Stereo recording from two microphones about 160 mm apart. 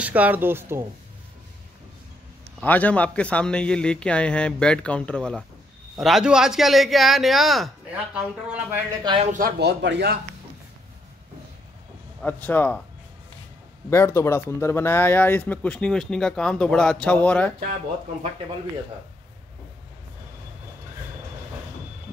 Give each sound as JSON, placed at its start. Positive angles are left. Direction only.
{"t": 0.0, "sound": "speech", "side_deg": -10}
{"t": 2.6, "sound": "speech", "side_deg": 10}
{"t": 9.0, "sound": "speech", "side_deg": -30}
{"t": 9.3, "sound": "a man's voice", "side_deg": -75}
{"t": 12.2, "sound": "speech", "side_deg": 10}
{"t": 13.8, "sound": "speech", "side_deg": 15}